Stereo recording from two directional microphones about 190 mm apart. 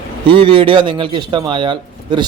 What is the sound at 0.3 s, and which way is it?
A man's voice, 25° right (ahead or behind).